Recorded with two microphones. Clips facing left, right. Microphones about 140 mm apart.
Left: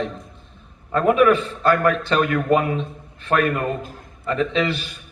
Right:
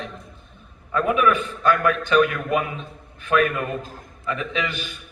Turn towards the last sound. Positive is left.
turn(degrees=35)  # may be behind; listen again after turning